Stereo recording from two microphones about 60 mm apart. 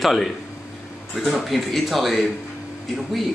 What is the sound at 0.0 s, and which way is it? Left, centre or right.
Speech, centre.